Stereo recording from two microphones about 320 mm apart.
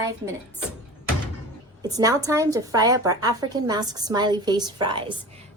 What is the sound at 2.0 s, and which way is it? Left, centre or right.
A woman's voice, centre.